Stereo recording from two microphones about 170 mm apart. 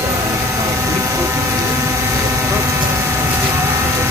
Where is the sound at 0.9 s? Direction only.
20° right (ahead or behind).